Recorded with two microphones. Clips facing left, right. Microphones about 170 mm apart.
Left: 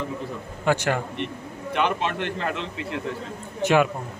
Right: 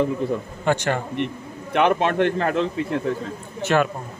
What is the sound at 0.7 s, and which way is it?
Speech, 5° left (ahead or behind).